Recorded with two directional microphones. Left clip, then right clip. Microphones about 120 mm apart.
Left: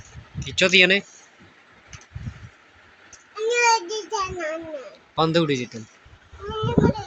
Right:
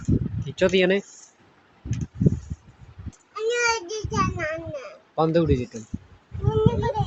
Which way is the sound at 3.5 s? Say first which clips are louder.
Left 4 dB; centre (ahead or behind).